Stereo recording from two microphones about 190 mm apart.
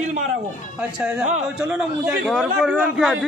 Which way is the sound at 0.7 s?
10° right (ahead or behind).